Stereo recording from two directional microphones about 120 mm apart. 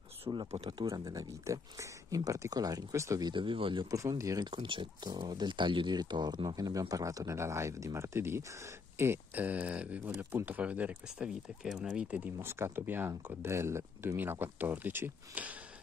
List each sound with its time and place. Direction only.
0.3 s speech: 35° right (ahead or behind)
0.6 s speech: 45° right (ahead or behind)
0.8 s speech: 30° right (ahead or behind); by 3.8 s 45° right (ahead or behind)
3.9 s speech: 30° right (ahead or behind)
4.5 s speech: 40° right (ahead or behind); by 12.2 s 5° right (ahead or behind)
12.4 s speech: 20° right (ahead or behind)